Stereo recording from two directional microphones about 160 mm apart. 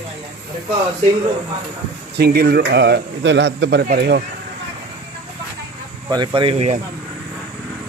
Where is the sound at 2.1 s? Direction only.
80° right.